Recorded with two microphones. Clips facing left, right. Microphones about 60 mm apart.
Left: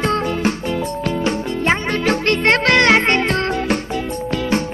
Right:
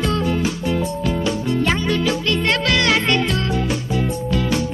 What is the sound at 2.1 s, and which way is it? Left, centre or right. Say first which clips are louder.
Music: left 4 dB; left.